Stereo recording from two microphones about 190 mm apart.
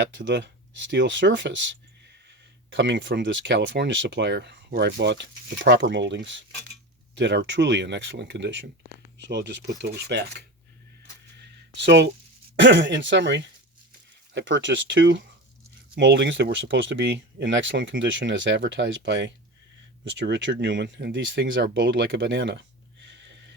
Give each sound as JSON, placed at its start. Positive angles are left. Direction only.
{"t": 0.0, "sound": "speech", "side_deg": -70}
{"t": 2.7, "sound": "speech", "side_deg": -70}
{"t": 9.2, "sound": "cutlery", "side_deg": -65}
{"t": 11.8, "sound": "cutlery", "side_deg": -65}
{"t": 12.5, "sound": "speech", "side_deg": -70}
{"t": 23.0, "sound": "a sound", "side_deg": -70}